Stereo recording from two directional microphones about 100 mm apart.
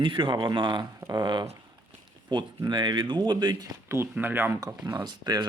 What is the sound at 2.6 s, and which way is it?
Speech, 50° right (ahead or behind).